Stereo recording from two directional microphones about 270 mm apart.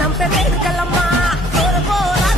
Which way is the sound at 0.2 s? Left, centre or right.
Centre.